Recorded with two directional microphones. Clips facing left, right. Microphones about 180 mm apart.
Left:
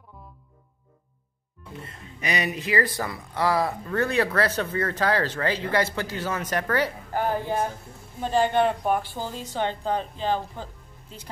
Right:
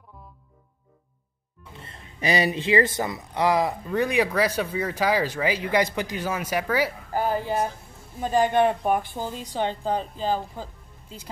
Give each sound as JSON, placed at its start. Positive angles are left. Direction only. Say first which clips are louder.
{"t": 1.8, "sound": "speech", "louder": "right 3 dB", "side_deg": -30}